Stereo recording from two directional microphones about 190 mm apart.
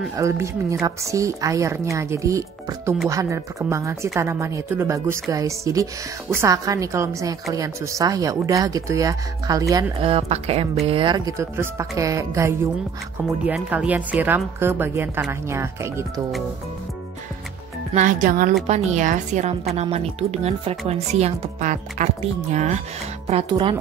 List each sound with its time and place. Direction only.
0.1 s a woman's voice: 15° right (ahead or behind)
10.0 s a woman's voice: 30° right (ahead or behind); by 16.1 s 15° right (ahead or behind)
17.9 s speech: 40° right (ahead or behind)